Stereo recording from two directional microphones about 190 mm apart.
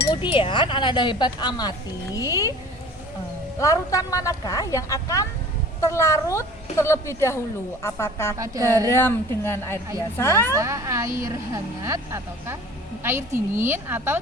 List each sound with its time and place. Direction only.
0.0 s chink: 25° left (ahead or behind)
0.3 s a woman's voice: 25° left (ahead or behind)
3.6 s a woman's voice: 15° left (ahead or behind)
10.5 s a woman's voice: 15° right (ahead or behind)